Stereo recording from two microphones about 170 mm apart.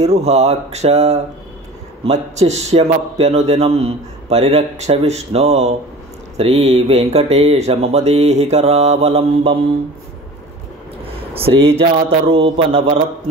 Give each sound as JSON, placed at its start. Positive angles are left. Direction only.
{"t": 0.0, "sound": "a man's voice", "side_deg": -40}
{"t": 11.1, "sound": "a sound", "side_deg": -35}
{"t": 11.8, "sound": "a man's voice", "side_deg": -35}